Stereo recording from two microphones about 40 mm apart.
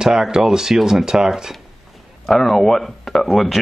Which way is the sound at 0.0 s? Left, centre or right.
Centre.